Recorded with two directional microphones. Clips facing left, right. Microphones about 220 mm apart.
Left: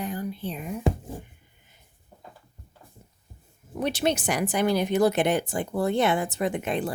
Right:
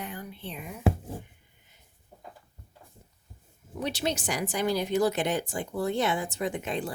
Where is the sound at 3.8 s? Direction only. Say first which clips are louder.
Left 5 dB; 55° left (ahead or behind).